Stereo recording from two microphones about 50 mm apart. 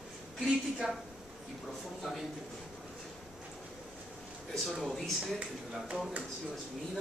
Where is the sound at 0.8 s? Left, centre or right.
Centre.